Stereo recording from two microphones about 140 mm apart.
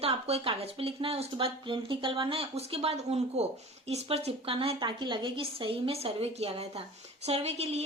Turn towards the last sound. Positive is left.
turn(degrees=-50)  # may be behind; listen again after turning